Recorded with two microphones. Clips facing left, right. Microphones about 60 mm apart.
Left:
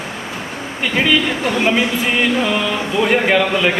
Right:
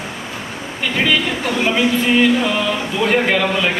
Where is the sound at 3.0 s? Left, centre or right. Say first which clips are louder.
Left 1 dB; centre.